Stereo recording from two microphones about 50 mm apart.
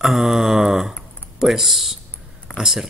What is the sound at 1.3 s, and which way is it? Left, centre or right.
Speech, centre.